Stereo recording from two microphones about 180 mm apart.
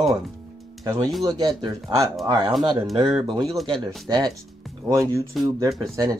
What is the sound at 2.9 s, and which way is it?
Speech, 25° right (ahead or behind).